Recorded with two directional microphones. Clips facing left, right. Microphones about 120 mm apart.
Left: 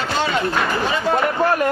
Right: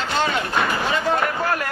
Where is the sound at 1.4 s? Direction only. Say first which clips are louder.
Left 6 dB; 25° left (ahead or behind).